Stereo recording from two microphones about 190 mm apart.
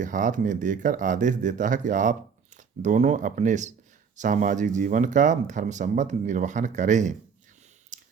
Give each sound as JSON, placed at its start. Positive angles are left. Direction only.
{"t": 0.0, "sound": "speech", "side_deg": -40}
{"t": 7.9, "sound": "clicking", "side_deg": -40}